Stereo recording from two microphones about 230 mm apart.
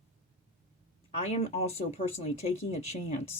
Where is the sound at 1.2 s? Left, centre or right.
Left.